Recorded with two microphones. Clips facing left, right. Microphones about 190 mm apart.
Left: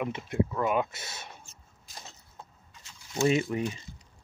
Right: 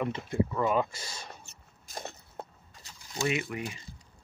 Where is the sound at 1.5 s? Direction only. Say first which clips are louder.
Even; 65° right (ahead or behind).